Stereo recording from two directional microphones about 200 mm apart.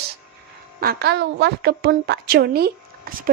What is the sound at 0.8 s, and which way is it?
A woman's voice, 50° right (ahead or behind).